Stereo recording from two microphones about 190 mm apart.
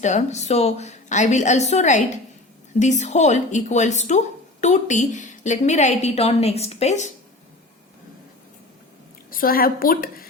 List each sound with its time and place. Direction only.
0.0 s a woman's voice: 40° left (ahead or behind)
9.3 s a woman's voice: 50° left (ahead or behind)